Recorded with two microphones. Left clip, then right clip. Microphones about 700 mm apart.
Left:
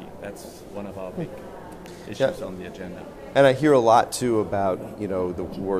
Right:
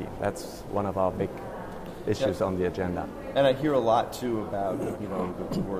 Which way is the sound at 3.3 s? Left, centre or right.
Left.